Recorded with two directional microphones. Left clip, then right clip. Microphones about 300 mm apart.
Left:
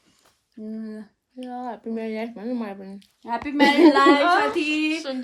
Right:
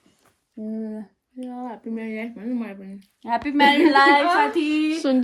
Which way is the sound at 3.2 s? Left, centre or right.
Right.